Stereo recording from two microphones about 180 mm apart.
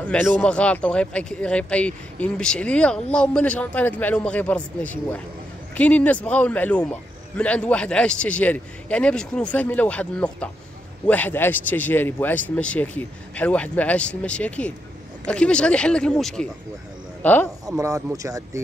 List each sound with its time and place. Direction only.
0.1 s speech: 5° left (ahead or behind)
17.6 s speech: 20° right (ahead or behind)